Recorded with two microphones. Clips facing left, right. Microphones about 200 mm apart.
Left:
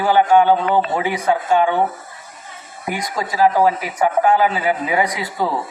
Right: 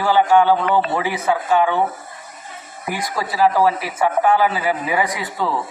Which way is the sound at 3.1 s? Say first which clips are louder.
Left 1 dB; 25° left (ahead or behind).